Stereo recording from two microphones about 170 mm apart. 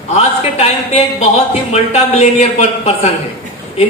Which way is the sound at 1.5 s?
40° left (ahead or behind).